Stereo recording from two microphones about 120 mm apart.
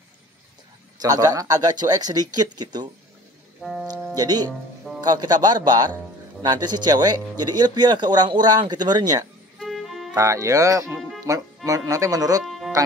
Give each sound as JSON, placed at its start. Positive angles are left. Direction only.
{"t": 1.0, "sound": "speech", "side_deg": -30}
{"t": 3.6, "sound": "speech", "side_deg": -10}
{"t": 4.1, "sound": "speech", "side_deg": -35}
{"t": 9.6, "sound": "music", "side_deg": 0}
{"t": 10.1, "sound": "speech", "side_deg": -30}
{"t": 11.0, "sound": "music", "side_deg": 0}
{"t": 11.2, "sound": "speech", "side_deg": -30}
{"t": 12.4, "sound": "music", "side_deg": 0}